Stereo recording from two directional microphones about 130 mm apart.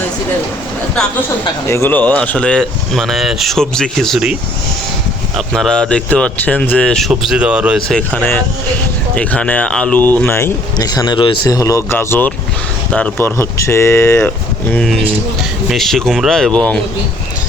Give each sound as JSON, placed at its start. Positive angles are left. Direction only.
{"t": 1.6, "sound": "speech", "side_deg": 20}
{"t": 5.5, "sound": "speech", "side_deg": 5}
{"t": 7.1, "sound": "speech", "side_deg": -5}
{"t": 7.8, "sound": "speech", "side_deg": 5}
{"t": 10.8, "sound": "speech", "side_deg": 30}
{"t": 11.4, "sound": "speech", "side_deg": 25}
{"t": 14.2, "sound": "speech", "side_deg": 10}